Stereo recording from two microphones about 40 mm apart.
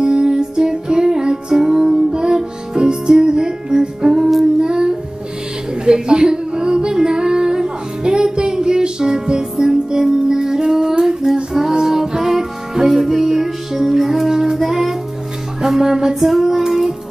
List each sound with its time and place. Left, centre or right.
0.0 s music: centre
5.9 s female singing: right; by 14.3 s centre
14.3 s child singing: centre
14.6 s music: centre